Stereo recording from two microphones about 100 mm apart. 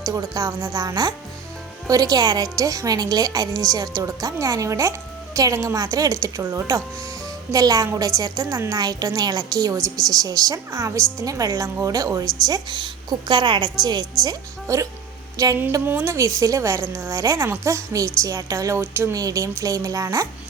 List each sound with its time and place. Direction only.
0.0 s a woman's voice: 35° right (ahead or behind)
14.3 s a woman's voice: 35° right (ahead or behind)
15.9 s a woman's voice: 25° right (ahead or behind)
19.1 s a woman's voice: 35° right (ahead or behind)